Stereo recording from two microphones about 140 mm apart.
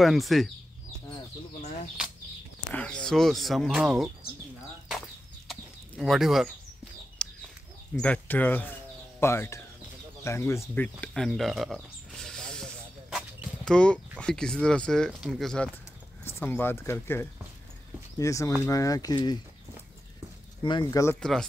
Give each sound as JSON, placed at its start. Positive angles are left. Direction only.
{"t": 0.0, "sound": "speech", "side_deg": 0}
{"t": 2.7, "sound": "speech", "side_deg": 10}
{"t": 5.5, "sound": "chicken", "side_deg": 0}
{"t": 7.2, "sound": "bird", "side_deg": 5}
{"t": 7.9, "sound": "speech", "side_deg": 10}
{"t": 13.7, "sound": "speech", "side_deg": 5}
{"t": 16.3, "sound": "speech", "side_deg": 15}
{"t": 20.6, "sound": "speech", "side_deg": 35}
{"t": 21.2, "sound": "speech", "side_deg": 5}